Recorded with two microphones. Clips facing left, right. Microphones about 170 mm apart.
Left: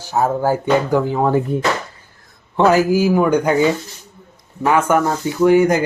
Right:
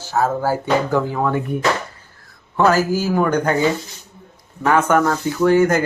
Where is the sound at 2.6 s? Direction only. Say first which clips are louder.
Left 3 dB; 20° left (ahead or behind).